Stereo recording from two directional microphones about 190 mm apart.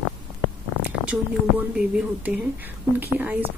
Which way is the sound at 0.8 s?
5° right (ahead or behind).